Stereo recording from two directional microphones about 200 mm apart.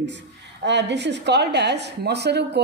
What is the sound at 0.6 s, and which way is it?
A woman's voice, 60° right (ahead or behind).